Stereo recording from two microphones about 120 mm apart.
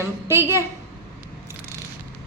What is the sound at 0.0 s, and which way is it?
Speech, 25° right (ahead or behind).